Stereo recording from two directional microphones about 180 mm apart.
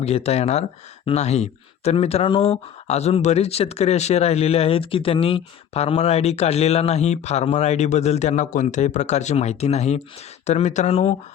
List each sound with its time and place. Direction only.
0.0 s speech: 35° left (ahead or behind)